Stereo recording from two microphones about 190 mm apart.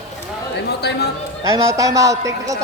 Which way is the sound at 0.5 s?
60° left (ahead or behind).